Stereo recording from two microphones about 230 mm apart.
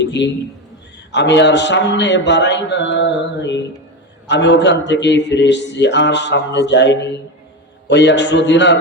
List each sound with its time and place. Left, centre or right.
0.0 s a man's voice: left